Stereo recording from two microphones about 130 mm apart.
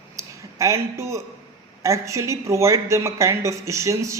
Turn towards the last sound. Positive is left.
turn(degrees=-25)  # may be behind; listen again after turning